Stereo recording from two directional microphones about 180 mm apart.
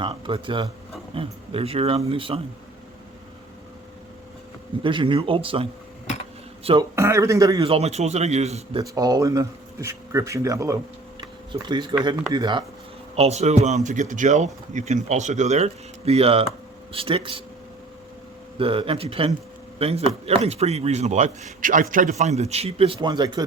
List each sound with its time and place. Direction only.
0.0 s speech: 30° right (ahead or behind)
4.8 s speech: 30° right (ahead or behind)
6.9 s speech: 15° right (ahead or behind)
7.7 s speech: 35° right (ahead or behind)
8.8 s speech: 20° right (ahead or behind)
11.2 s tick-tock: 25° right (ahead or behind)
12.3 s speech: 25° right (ahead or behind)
13.1 s speech: 35° right (ahead or behind)
18.6 s speech: 30° right (ahead or behind)